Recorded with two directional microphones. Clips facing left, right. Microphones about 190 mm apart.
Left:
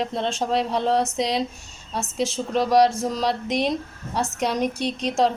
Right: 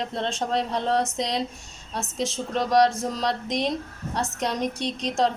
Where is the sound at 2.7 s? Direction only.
5° left (ahead or behind).